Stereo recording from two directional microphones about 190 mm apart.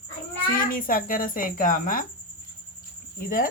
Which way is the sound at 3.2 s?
45° left (ahead or behind).